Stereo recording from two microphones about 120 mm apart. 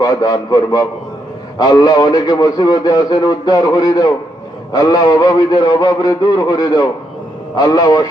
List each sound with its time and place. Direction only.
0.0 s a man's voice: 30° left (ahead or behind)